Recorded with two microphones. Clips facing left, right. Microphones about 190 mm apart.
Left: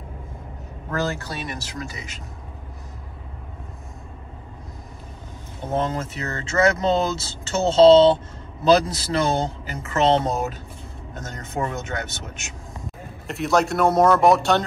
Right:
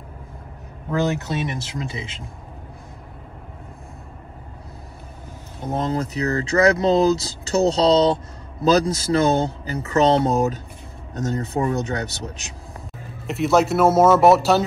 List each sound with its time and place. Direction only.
0.8 s speech: 15° right (ahead or behind)
5.8 s speech: 35° right (ahead or behind)
13.3 s speech: centre (ahead or behind)